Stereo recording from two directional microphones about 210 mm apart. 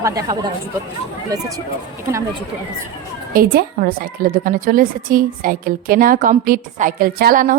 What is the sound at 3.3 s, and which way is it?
A woman's voice, 45° right (ahead or behind).